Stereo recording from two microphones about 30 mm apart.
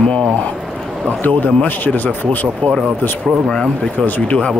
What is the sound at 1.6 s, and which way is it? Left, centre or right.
Speech, left.